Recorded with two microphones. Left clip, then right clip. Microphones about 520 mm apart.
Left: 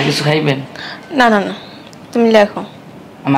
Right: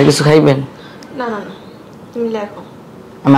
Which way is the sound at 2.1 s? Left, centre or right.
Left.